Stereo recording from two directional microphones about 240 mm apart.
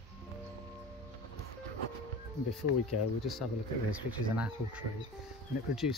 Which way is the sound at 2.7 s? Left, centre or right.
Left.